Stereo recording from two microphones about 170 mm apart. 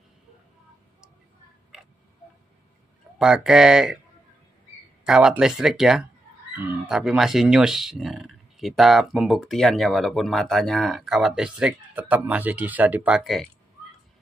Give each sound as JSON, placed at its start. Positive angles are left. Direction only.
{"t": 3.2, "sound": "speech", "side_deg": -5}
{"t": 5.0, "sound": "speech", "side_deg": -5}